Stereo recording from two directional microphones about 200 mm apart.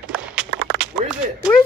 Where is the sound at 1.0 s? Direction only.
40° right (ahead or behind).